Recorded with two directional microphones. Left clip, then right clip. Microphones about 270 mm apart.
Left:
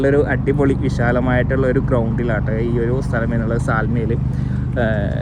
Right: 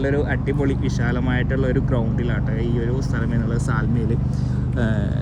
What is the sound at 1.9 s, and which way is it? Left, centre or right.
Speech, left.